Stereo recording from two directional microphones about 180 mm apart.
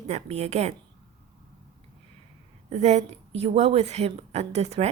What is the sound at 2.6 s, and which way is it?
Speech, 40° right (ahead or behind).